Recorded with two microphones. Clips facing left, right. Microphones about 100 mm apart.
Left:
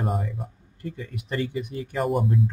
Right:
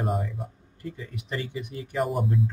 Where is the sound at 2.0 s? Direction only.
Centre (ahead or behind).